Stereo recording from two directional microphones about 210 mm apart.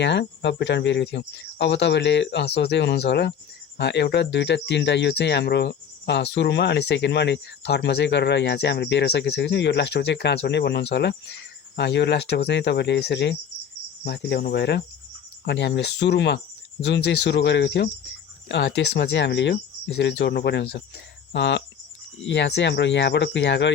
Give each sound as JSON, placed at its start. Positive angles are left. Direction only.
{"t": 0.0, "sound": "speech", "side_deg": 55}